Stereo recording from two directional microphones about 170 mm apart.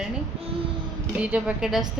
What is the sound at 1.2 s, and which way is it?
Speech, 5° right (ahead or behind).